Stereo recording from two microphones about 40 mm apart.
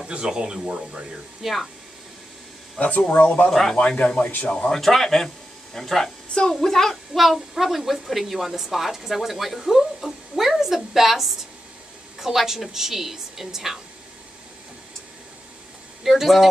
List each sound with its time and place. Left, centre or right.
0.4 s speech: right
1.4 s speech: centre
2.8 s speech: left
3.4 s a man's voice: centre
3.8 s speech: left
4.2 s speech: left
4.6 s a man's voice: centre
7.2 s a woman's voice: centre
16.0 s speech: centre